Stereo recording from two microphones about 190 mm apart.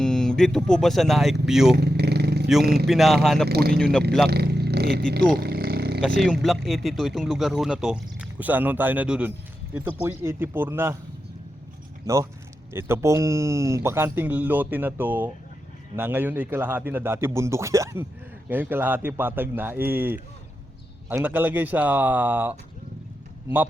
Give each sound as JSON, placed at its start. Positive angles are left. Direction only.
{"t": 0.0, "sound": "speech", "side_deg": 5}
{"t": 1.7, "sound": "vehicle", "side_deg": -60}
{"t": 2.8, "sound": "speech", "side_deg": 0}
{"t": 3.5, "sound": "speech", "side_deg": -55}
{"t": 3.8, "sound": "speech", "side_deg": 5}
{"t": 4.3, "sound": "a sound", "side_deg": -60}
{"t": 5.4, "sound": "roaring cats", "side_deg": -60}
{"t": 6.0, "sound": "speech", "side_deg": 0}
{"t": 12.0, "sound": "speech", "side_deg": -15}